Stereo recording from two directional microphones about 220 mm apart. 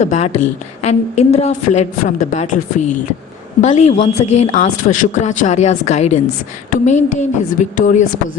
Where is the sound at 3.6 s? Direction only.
30° left (ahead or behind).